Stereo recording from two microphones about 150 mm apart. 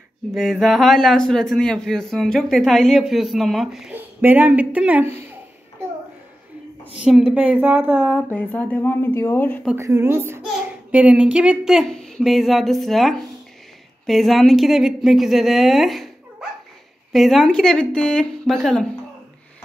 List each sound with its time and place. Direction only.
0.3 s speech: centre (ahead or behind)
7.1 s speech: 5° right (ahead or behind)
8.3 s speech: 10° left (ahead or behind)
9.8 s a child's voice: 20° right (ahead or behind); by 18.9 s centre (ahead or behind)